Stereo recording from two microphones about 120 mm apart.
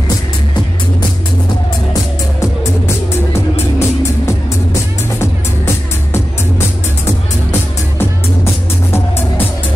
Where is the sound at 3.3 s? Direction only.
25° left (ahead or behind).